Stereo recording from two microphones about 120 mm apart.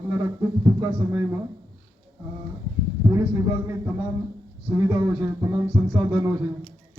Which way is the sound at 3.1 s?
25° right (ahead or behind).